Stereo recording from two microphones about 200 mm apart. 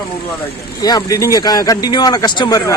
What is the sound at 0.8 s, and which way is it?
Speech, 20° left (ahead or behind).